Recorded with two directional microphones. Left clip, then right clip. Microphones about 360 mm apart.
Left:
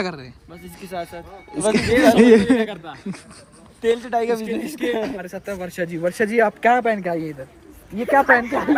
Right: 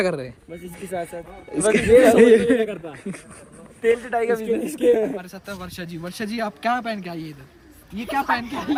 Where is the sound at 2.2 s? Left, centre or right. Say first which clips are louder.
Even; centre.